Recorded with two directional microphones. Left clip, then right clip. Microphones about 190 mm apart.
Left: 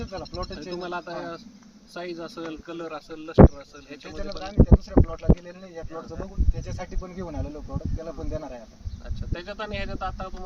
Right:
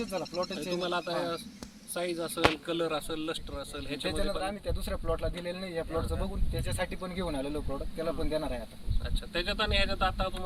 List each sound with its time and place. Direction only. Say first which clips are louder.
0.5 s speech: right 1 dB; 10° right (ahead or behind)
0.8 s speech: right 1 dB; 25° right (ahead or behind)
4.0 s speech: right 3 dB; centre (ahead or behind)